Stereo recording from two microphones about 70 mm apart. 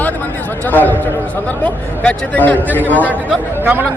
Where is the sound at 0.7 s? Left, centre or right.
Left.